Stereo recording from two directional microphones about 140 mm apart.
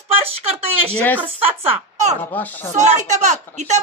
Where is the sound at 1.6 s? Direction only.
50° right (ahead or behind).